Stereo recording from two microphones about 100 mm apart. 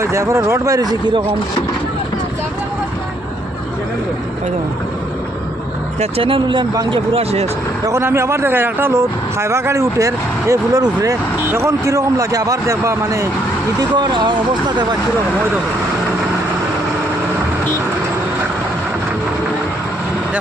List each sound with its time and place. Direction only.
0.0 s a man's voice: 30° right (ahead or behind)
6.0 s speech: 70° right (ahead or behind)
6.9 s speech: 75° right (ahead or behind)
7.9 s a man's voice: 30° right (ahead or behind)
13.7 s speech: 45° right (ahead or behind)